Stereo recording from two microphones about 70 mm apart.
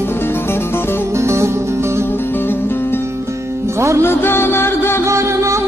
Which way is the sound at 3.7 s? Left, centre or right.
Right.